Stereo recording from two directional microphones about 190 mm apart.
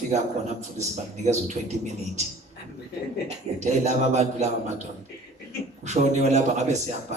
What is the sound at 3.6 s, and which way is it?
Speech, 40° right (ahead or behind).